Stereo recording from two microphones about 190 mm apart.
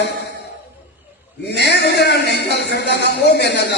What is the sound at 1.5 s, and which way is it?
A man's voice, 65° left (ahead or behind).